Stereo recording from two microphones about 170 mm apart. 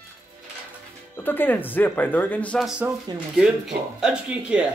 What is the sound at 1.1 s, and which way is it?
Speech, 10° left (ahead or behind).